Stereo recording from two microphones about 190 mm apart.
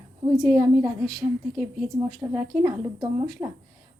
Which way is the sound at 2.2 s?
15° right (ahead or behind).